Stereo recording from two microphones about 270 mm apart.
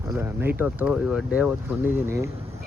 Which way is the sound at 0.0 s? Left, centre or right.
Centre.